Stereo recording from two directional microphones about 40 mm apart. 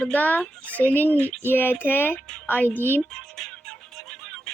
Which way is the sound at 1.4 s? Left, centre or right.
Left.